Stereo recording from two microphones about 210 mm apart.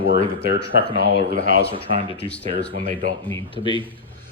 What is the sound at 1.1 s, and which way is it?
Speech, 55° left (ahead or behind).